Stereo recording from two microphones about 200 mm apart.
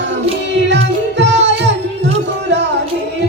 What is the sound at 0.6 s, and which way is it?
Music, 60° right (ahead or behind).